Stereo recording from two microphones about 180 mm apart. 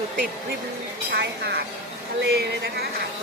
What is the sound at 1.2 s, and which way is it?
Speech, 65° right (ahead or behind).